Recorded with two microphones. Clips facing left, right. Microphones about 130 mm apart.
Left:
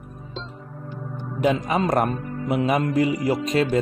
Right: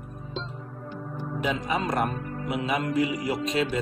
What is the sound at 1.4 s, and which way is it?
A man's voice, 45° left (ahead or behind).